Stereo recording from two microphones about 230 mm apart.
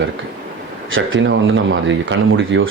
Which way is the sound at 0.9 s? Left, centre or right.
Right.